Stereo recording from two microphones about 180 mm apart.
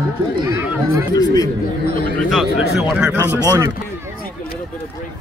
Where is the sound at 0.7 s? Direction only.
10° right (ahead or behind).